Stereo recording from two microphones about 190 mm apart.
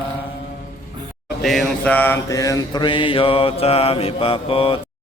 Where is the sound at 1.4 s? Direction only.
Centre (ahead or behind); by 4.8 s 30° left (ahead or behind).